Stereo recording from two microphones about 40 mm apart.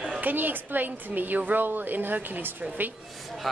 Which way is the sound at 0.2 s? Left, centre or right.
Right.